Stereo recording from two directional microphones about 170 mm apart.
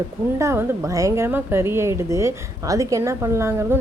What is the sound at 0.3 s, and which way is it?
A woman's voice, 15° right (ahead or behind).